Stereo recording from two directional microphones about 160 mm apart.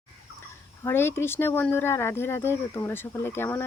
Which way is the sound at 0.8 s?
15° left (ahead or behind).